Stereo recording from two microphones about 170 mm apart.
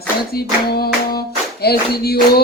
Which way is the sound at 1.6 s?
65° left (ahead or behind).